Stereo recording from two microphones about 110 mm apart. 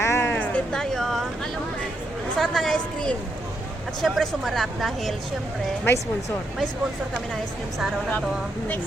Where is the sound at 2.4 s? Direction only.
5° left (ahead or behind).